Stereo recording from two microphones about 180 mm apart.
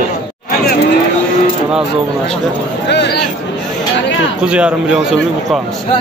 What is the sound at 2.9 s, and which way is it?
Speech, 70° left (ahead or behind).